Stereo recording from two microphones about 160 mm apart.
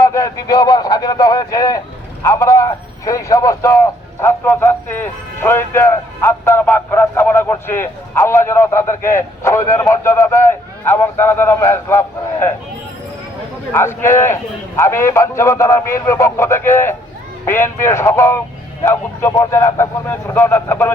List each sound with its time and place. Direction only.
0.0 s a man's voice: 20° left (ahead or behind)
13.7 s a man's voice: 15° left (ahead or behind)